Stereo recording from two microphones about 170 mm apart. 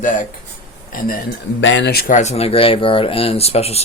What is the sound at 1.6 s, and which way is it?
Speech, 90° left.